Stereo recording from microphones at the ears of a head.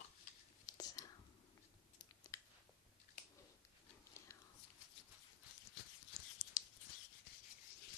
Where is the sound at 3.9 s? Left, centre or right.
Left.